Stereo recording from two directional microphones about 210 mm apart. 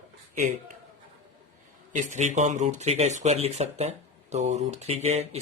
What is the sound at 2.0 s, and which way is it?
Speech, 35° right (ahead or behind).